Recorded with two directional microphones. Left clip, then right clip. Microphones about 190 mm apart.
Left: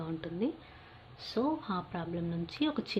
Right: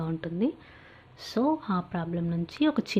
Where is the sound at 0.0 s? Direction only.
25° right (ahead or behind).